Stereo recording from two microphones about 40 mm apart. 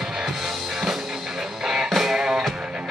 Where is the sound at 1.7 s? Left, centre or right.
Centre.